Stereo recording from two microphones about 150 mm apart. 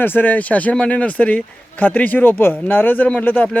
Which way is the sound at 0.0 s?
10° left (ahead or behind).